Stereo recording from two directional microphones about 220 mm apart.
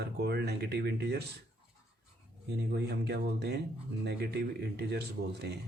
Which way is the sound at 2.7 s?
45° right (ahead or behind).